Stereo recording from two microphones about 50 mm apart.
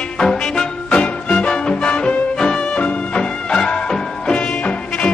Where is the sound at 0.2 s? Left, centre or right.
Centre.